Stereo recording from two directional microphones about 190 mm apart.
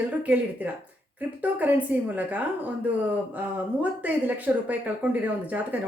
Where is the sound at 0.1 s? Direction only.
10° right (ahead or behind).